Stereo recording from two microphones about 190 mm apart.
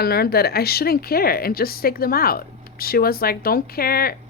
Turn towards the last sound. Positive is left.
turn(degrees=50)  # may be behind; listen again after turning